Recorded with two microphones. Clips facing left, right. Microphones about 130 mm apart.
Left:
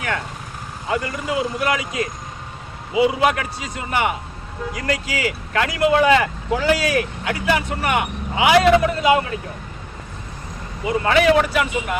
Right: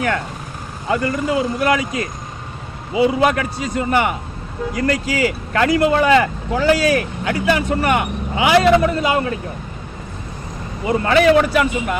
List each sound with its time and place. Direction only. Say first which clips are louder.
1.0 s a man's voice: right 5 dB; 40° right (ahead or behind)
10.8 s speech: right 2 dB; 40° right (ahead or behind)